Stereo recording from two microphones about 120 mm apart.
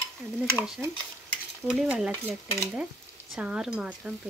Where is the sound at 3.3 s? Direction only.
5° right (ahead or behind).